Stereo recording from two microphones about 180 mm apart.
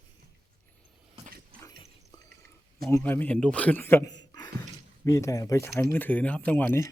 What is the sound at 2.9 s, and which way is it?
A man's voice, 10° left (ahead or behind).